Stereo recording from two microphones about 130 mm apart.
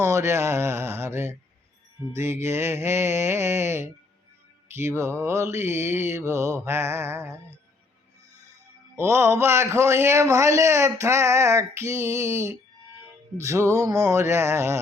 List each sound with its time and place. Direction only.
0.0 s a man's voice: 20° right (ahead or behind)
9.0 s a man's voice: 20° right (ahead or behind)